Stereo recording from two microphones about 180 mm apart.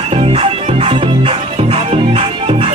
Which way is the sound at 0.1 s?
30° right (ahead or behind).